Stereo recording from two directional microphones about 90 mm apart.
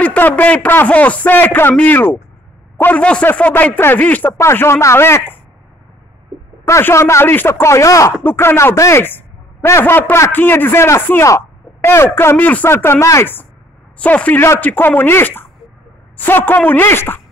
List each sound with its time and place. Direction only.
0.0 s a man's voice: 20° left (ahead or behind)
4.3 s a man's voice: 30° left (ahead or behind)
6.6 s speech: 30° left (ahead or behind)
8.2 s a man's voice: 25° left (ahead or behind)
14.0 s a man's voice: 15° left (ahead or behind)